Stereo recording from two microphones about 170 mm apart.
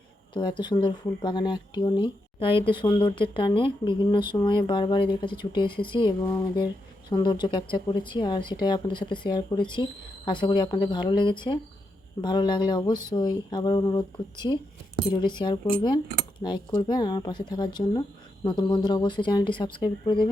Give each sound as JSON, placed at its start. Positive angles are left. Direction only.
{"t": 0.3, "sound": "speech", "side_deg": 25}